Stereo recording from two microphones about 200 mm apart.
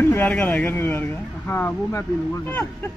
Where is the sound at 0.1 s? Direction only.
10° left (ahead or behind).